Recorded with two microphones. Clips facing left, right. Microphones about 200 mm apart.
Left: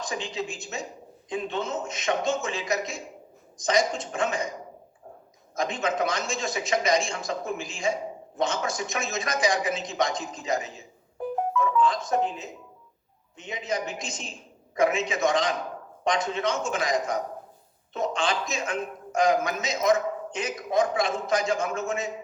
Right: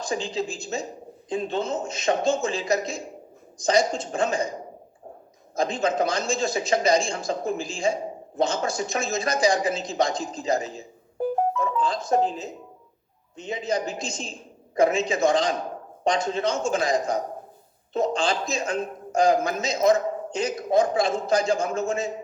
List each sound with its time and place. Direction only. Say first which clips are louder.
0.0 s a man's voice: right 4 dB; 30° right (ahead or behind)